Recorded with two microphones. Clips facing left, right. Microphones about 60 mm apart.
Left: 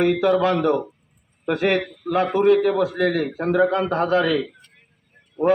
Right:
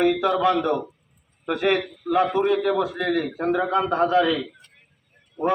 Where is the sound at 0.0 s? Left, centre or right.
Centre.